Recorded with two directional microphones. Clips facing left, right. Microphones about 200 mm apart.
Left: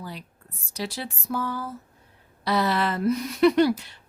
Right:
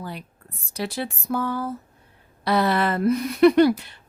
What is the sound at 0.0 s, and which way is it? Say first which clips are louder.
Speech: right 3 dB; 55° right (ahead or behind).